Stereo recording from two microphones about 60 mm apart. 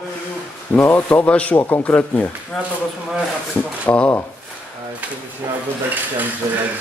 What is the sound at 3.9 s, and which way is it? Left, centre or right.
Speech, left.